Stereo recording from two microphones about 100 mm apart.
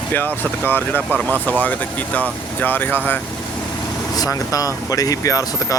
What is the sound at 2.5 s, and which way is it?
Speech, 20° left (ahead or behind).